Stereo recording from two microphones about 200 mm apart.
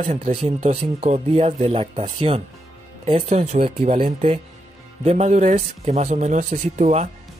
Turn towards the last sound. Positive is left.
turn(degrees=-35)  # may be behind; listen again after turning